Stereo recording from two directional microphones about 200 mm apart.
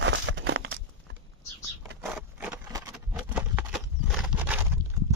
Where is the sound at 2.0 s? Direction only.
5° right (ahead or behind).